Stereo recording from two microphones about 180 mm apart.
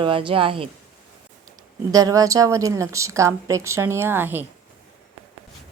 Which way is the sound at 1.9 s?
20° right (ahead or behind).